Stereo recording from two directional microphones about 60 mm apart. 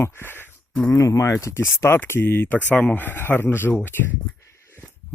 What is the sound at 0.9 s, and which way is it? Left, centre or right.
Speech, left.